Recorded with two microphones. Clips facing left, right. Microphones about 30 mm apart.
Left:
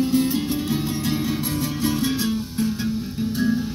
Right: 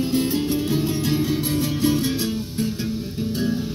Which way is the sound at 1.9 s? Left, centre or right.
Left.